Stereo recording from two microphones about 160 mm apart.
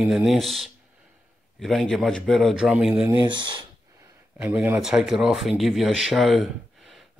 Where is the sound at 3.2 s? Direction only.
30° right (ahead or behind).